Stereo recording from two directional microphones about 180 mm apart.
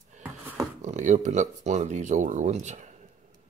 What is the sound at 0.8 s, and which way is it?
Speech, 45° right (ahead or behind).